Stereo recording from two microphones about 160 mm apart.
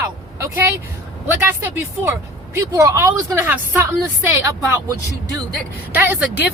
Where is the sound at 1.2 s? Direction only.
15° right (ahead or behind).